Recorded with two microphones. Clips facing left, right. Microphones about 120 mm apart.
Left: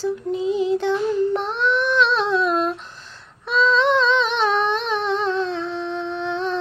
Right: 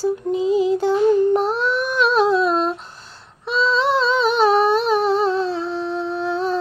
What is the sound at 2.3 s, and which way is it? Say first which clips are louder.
Humming: right 2 dB; 35° right (ahead or behind).